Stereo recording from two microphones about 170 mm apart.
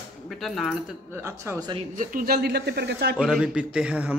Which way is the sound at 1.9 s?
50° right (ahead or behind).